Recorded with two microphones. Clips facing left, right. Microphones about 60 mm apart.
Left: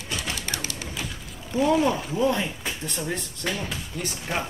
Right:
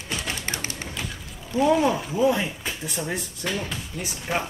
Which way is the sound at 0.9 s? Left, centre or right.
Centre.